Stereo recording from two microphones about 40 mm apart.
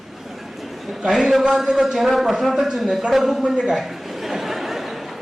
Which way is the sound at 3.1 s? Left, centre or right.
Centre.